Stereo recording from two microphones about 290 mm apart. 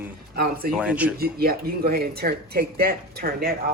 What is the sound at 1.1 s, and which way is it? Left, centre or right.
Speech, right.